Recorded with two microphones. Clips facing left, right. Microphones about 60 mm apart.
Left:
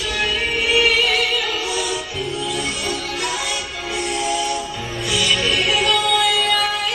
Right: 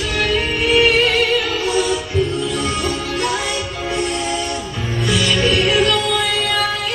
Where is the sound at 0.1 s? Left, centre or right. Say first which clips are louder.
Right 2 dB; right.